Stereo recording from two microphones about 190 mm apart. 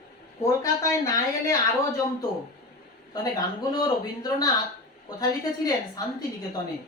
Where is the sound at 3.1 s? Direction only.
20° left (ahead or behind).